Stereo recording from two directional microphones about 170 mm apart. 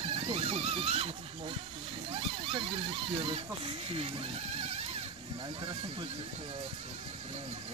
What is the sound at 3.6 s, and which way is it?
Speech, 35° right (ahead or behind).